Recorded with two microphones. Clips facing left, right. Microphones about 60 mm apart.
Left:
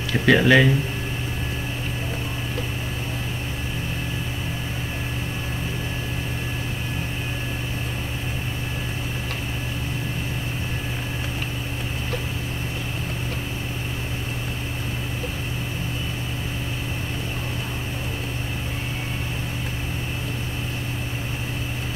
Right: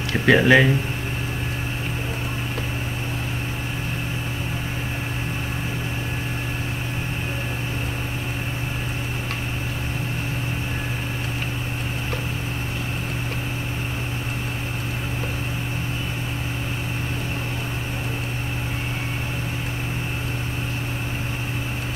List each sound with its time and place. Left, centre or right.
0.1 s speech: centre